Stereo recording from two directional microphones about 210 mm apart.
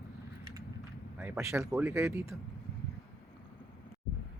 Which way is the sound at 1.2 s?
10° right (ahead or behind).